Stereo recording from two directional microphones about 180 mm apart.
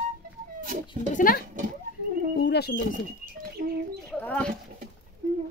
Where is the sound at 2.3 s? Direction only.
70° left (ahead or behind).